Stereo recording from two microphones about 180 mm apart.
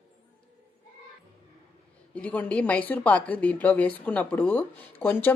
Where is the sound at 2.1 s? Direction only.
10° left (ahead or behind).